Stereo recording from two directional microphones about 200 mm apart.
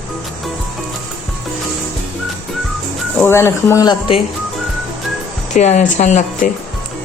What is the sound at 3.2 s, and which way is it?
Speech, 10° left (ahead or behind).